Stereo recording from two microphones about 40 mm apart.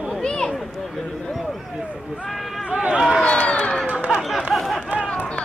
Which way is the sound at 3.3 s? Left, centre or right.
Left.